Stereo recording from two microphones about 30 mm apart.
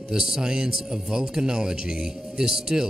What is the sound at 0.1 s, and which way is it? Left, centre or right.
Speech, right.